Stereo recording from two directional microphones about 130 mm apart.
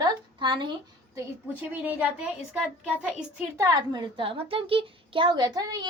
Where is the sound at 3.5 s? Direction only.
25° right (ahead or behind).